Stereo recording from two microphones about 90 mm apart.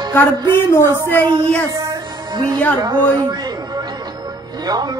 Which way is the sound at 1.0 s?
20° left (ahead or behind).